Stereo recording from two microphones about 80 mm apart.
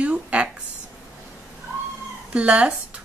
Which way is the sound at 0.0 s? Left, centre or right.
Centre.